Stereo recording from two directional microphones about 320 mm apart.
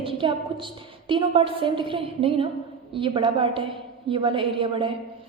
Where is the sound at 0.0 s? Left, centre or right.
Centre.